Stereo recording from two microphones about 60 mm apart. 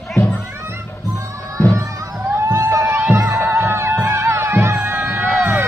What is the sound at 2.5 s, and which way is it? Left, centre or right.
Crowd, right.